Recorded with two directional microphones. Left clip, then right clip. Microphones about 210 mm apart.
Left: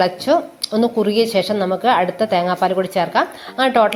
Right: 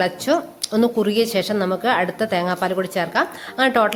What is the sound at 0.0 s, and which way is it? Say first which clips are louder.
A woman's voice: left 4 dB; 5° right (ahead or behind).